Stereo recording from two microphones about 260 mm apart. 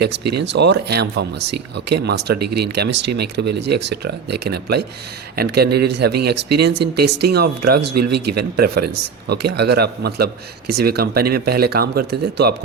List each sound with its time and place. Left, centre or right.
0.3 s speech: right